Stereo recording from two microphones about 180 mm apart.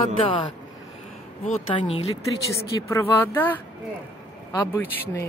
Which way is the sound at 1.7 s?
30° left (ahead or behind).